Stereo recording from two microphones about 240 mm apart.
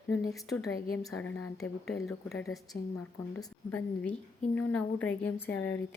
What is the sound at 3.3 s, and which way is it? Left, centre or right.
Speech, centre.